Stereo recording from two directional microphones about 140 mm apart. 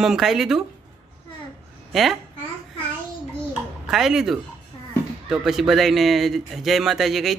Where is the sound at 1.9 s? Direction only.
Centre (ahead or behind).